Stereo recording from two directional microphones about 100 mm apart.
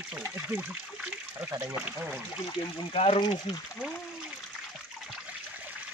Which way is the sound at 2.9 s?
80° left.